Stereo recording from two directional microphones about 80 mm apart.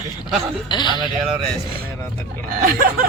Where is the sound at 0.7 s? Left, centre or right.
Left.